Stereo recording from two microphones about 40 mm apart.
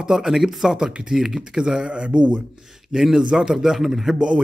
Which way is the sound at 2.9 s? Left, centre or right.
Centre.